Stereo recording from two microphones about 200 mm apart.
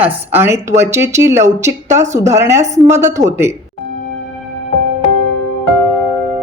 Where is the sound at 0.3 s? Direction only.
10° right (ahead or behind).